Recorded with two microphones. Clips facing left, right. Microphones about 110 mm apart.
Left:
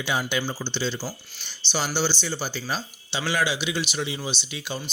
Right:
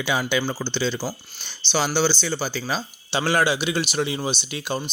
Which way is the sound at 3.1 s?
50° right (ahead or behind).